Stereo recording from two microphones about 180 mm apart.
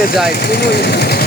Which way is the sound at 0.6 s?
65° left (ahead or behind).